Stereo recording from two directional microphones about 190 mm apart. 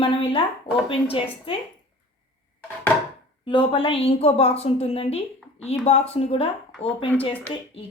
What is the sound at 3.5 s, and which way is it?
A woman's voice, 25° left (ahead or behind).